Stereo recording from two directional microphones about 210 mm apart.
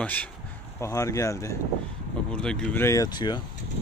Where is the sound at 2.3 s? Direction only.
5° left (ahead or behind); by 3.4 s 20° left (ahead or behind).